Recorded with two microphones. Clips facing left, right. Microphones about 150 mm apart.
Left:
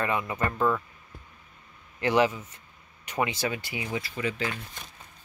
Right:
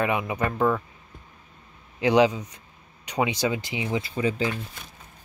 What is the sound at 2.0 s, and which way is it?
Speech, 15° right (ahead or behind).